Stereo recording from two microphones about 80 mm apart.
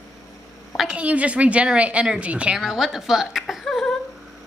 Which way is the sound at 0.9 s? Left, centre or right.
Centre.